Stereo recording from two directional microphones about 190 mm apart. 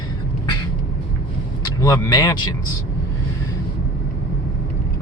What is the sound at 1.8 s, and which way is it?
Speech, 15° left (ahead or behind).